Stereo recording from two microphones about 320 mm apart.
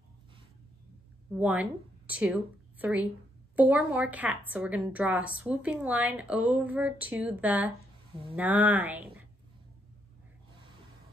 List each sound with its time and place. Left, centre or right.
1.3 s a woman's voice: centre